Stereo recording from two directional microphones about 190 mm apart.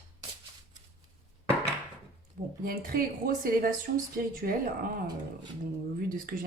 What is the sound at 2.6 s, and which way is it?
Speech, 50° right (ahead or behind).